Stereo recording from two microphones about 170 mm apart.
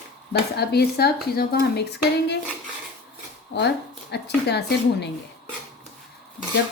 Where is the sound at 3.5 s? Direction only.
90° left.